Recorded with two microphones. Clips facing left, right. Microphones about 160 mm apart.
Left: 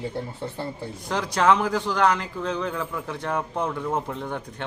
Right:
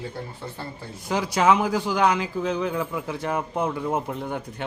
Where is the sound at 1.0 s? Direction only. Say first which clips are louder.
Right 1 dB; 10° right (ahead or behind).